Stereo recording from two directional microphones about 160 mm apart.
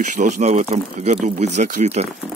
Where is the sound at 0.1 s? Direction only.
50° right (ahead or behind).